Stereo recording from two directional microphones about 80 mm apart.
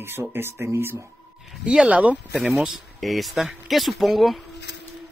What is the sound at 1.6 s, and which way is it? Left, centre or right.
Speech, centre.